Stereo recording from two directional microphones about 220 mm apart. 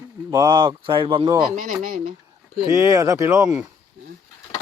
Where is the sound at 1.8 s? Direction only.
40° right (ahead or behind).